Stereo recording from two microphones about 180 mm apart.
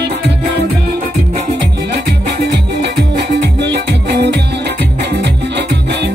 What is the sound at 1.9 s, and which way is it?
Music, 65° right (ahead or behind).